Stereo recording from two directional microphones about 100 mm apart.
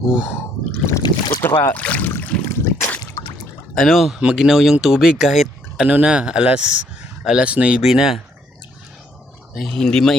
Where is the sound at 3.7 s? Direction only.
Centre (ahead or behind).